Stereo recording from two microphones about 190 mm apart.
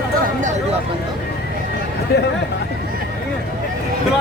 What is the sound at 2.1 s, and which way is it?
Speech, 60° left (ahead or behind).